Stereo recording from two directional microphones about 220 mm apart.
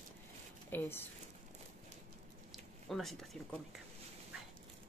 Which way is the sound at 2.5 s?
Centre (ahead or behind).